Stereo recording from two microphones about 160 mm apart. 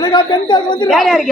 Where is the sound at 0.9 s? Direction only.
Centre (ahead or behind).